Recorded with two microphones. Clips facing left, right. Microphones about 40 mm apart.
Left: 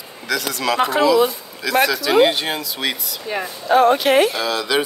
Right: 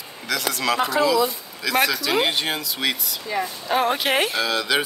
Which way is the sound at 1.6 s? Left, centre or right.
Centre.